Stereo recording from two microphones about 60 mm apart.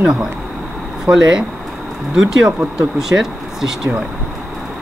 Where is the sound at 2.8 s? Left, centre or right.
Centre.